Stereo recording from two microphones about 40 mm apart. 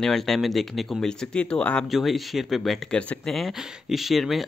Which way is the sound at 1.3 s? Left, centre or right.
Left.